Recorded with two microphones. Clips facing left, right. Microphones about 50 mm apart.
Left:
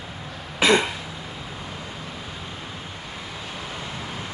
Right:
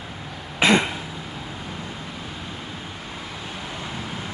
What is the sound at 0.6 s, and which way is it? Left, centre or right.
Throat clearing, right.